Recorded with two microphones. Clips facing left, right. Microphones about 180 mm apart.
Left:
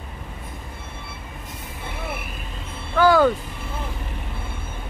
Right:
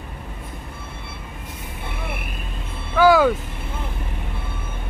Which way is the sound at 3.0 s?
5° right (ahead or behind).